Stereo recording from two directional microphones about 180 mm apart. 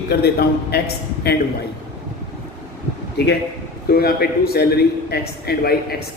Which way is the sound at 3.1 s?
65° left (ahead or behind).